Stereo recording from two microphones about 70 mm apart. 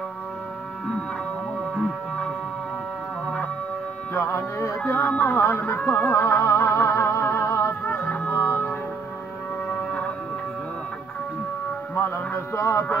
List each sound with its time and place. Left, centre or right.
4.1 s speech: left
6.0 s music: left
9.7 s music: centre
12.5 s music: left